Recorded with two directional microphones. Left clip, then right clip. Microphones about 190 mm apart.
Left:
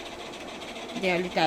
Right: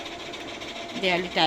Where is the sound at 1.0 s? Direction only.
10° left (ahead or behind).